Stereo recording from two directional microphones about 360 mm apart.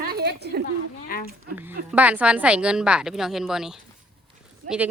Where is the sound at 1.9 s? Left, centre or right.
Centre.